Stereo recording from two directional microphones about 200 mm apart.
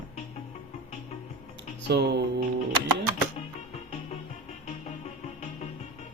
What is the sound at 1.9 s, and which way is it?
Speech, 55° right (ahead or behind).